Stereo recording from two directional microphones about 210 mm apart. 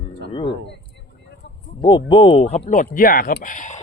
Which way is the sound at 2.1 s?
25° left (ahead or behind).